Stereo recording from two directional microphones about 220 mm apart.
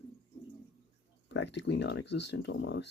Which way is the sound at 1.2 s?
55° left (ahead or behind).